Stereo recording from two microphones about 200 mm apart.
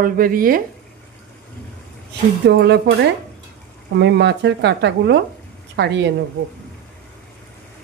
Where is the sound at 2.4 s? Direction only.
60° right (ahead or behind).